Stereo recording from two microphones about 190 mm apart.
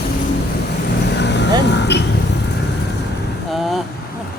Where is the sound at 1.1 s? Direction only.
65° left (ahead or behind).